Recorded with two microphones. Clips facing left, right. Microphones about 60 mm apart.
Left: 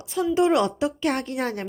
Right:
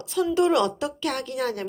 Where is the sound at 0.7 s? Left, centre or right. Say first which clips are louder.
Left 4 dB; left.